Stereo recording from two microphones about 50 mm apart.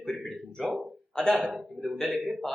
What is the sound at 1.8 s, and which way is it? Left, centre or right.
Speech, centre.